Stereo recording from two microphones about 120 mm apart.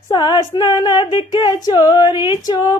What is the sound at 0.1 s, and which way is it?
Female singing, 35° left (ahead or behind).